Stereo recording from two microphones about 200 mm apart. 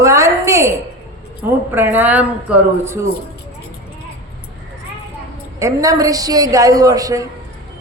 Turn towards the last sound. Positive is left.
turn(degrees=-15)  # may be behind; listen again after turning